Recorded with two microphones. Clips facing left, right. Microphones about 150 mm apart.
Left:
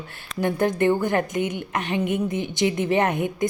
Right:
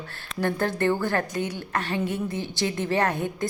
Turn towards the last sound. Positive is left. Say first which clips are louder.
# left 3 dB
turn(degrees=20)  # may be behind; listen again after turning